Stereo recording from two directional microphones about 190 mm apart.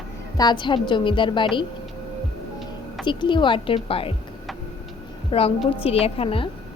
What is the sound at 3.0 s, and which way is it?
A woman's voice, 25° left (ahead or behind).